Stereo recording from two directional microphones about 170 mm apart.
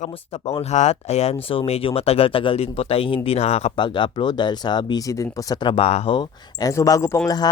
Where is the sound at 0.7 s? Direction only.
40° left (ahead or behind).